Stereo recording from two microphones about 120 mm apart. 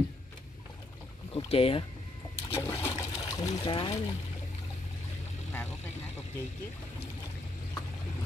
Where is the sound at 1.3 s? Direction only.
50° left (ahead or behind).